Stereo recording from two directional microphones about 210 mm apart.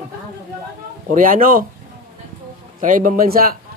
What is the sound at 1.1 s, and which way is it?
Speech, 40° right (ahead or behind).